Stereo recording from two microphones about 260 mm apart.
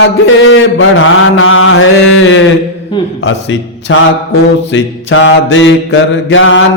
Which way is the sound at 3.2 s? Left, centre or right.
Left.